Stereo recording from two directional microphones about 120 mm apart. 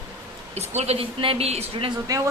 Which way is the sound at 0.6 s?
60° right (ahead or behind).